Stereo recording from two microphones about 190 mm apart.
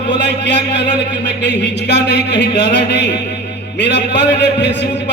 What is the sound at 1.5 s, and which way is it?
A man's voice, 65° left (ahead or behind).